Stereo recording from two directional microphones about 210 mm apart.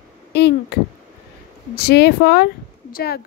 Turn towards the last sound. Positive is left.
turn(degrees=50)  # may be behind; listen again after turning